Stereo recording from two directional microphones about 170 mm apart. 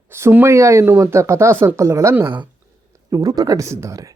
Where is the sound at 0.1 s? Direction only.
15° right (ahead or behind).